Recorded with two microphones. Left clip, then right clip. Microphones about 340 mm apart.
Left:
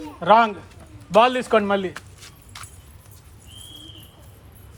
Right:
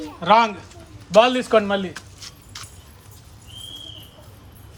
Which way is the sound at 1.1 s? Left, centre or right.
Centre.